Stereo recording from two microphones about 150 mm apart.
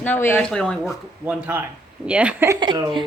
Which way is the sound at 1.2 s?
10° right (ahead or behind).